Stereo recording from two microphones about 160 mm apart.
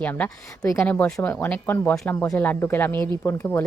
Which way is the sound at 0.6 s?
20° left (ahead or behind).